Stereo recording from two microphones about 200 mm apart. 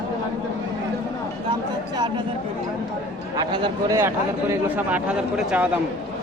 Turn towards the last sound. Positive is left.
turn(degrees=-5)  # may be behind; listen again after turning